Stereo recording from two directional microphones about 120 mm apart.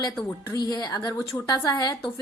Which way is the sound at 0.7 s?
35° left (ahead or behind).